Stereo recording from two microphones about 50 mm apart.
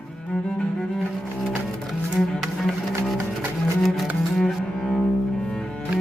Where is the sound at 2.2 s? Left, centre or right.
Centre.